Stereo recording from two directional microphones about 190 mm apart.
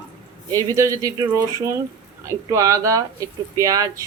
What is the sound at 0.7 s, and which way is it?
Speech, 15° right (ahead or behind).